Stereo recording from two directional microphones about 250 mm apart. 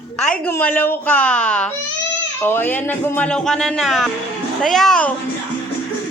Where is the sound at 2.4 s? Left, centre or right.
Centre.